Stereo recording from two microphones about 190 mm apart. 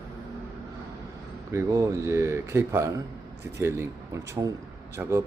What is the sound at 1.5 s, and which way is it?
Speech, 15° right (ahead or behind).